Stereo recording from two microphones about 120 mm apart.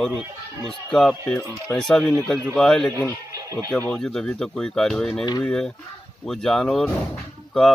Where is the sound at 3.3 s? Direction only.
30° right (ahead or behind).